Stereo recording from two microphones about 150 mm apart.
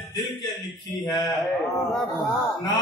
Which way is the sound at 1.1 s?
20° left (ahead or behind).